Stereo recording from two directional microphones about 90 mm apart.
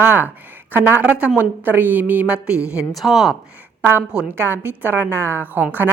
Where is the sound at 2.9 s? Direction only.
Centre (ahead or behind).